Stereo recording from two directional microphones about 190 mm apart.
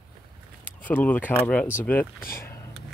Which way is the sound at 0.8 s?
10° left (ahead or behind).